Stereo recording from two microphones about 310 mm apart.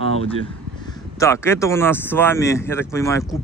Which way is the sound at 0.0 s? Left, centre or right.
Centre.